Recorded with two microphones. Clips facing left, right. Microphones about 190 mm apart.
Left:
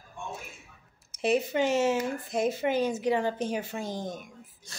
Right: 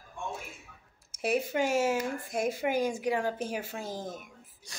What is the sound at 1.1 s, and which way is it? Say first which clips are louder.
Speech: left 3 dB; 10° right (ahead or behind).